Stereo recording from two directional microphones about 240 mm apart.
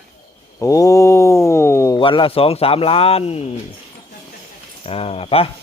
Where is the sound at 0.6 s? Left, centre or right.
Centre.